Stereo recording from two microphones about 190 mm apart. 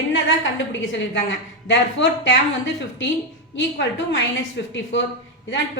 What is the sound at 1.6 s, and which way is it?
Speech, 70° left (ahead or behind).